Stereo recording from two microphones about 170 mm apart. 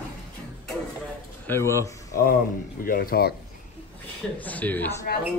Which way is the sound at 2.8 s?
60° left (ahead or behind).